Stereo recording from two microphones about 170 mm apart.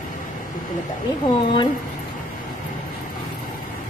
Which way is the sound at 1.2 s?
30° left (ahead or behind).